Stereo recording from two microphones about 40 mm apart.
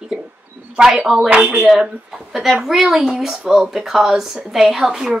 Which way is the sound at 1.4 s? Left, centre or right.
Right.